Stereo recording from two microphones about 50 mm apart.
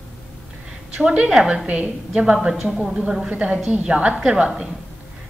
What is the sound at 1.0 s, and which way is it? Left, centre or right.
A woman's voice, right.